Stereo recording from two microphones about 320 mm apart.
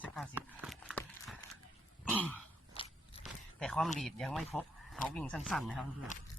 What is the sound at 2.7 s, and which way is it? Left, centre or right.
Biting, centre.